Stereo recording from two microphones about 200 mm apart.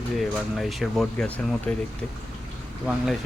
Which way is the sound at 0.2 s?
Centre (ahead or behind).